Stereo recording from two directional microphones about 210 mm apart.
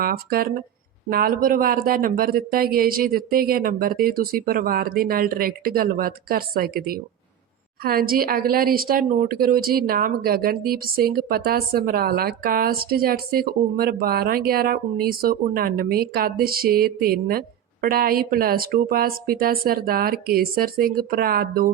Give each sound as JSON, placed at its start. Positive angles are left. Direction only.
{"t": 0.0, "sound": "a woman's voice", "side_deg": -45}